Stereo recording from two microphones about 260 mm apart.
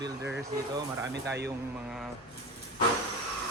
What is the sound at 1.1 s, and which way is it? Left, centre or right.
Speech, right.